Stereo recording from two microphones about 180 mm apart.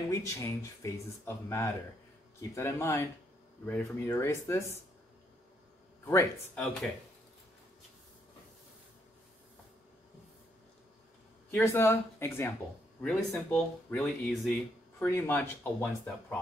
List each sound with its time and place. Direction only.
0.1 s speech: 15° left (ahead or behind)
6.0 s speech: 15° left (ahead or behind)
11.5 s speech: 15° left (ahead or behind)